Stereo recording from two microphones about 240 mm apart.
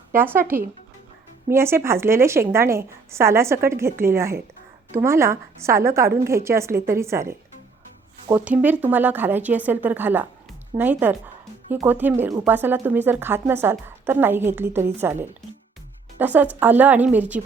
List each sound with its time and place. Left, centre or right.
0.1 s speech: centre